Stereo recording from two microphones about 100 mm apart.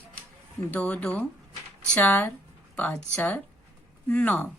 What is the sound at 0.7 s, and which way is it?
A woman's voice, 15° left (ahead or behind).